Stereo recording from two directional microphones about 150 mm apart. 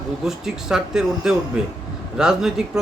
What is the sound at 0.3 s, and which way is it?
Speech, 5° right (ahead or behind).